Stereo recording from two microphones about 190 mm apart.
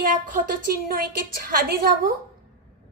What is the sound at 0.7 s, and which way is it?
A woman's voice, 50° right (ahead or behind).